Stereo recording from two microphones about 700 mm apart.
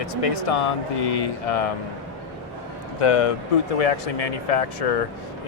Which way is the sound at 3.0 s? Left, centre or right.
Left.